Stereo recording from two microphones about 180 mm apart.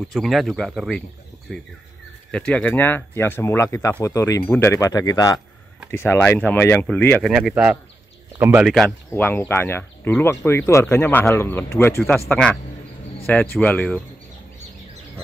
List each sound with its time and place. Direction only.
0.0 s speech: centre (ahead or behind)
2.3 s speech: 5° left (ahead or behind)
7.2 s a man's voice: 5° right (ahead or behind)
8.6 s speech: centre (ahead or behind)
9.1 s speech: 10° left (ahead or behind)